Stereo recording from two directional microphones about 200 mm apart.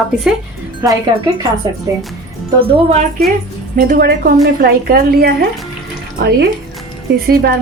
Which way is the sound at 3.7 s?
45° right (ahead or behind).